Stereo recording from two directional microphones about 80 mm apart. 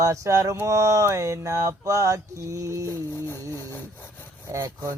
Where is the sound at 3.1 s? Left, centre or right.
Left.